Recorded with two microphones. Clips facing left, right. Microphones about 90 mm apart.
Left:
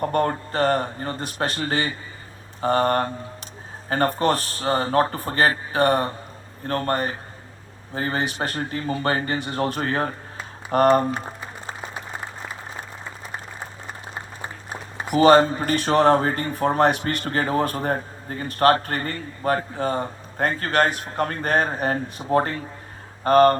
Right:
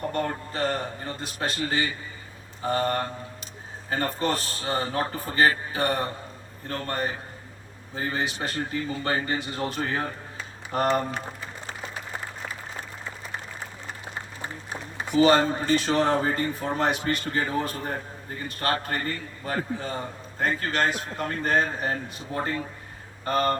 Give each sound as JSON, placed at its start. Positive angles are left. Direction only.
{"t": 0.1, "sound": "speech", "side_deg": 50}
{"t": 15.1, "sound": "speech", "side_deg": 55}